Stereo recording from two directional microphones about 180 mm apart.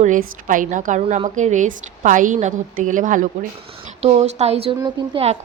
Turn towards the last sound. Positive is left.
turn(degrees=-30)  # may be behind; listen again after turning